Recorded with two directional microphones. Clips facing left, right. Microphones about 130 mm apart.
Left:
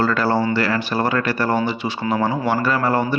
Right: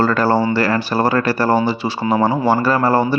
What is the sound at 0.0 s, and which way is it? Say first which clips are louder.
Speech: right 3 dB; 40° right (ahead or behind).